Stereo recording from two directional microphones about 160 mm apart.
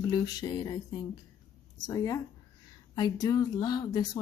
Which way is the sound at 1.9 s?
20° left (ahead or behind).